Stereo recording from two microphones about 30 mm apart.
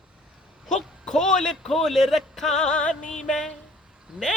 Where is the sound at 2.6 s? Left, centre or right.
Left.